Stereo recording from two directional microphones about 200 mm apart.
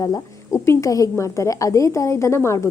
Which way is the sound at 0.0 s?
15° left (ahead or behind).